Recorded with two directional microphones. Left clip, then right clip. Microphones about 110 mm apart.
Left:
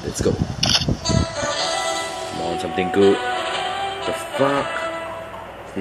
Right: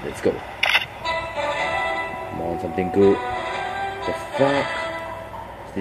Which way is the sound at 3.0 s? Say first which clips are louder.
Left 1 dB; 20° left (ahead or behind).